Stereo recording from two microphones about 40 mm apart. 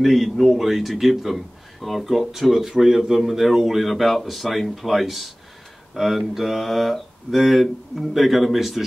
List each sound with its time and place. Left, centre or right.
0.0 s a man's voice: centre